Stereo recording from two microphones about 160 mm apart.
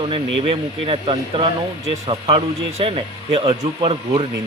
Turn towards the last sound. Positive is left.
turn(degrees=-35)  # may be behind; listen again after turning